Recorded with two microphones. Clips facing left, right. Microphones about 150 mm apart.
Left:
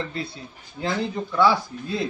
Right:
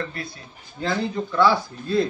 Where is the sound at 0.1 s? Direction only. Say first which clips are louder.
Left 3 dB; 25° left (ahead or behind).